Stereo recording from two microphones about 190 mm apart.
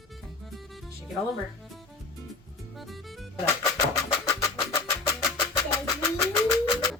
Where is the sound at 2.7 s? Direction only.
Centre (ahead or behind).